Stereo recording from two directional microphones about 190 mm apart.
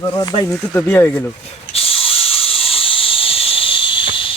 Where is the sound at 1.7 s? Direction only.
30° left (ahead or behind).